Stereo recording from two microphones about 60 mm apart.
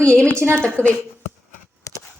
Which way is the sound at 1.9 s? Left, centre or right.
Left.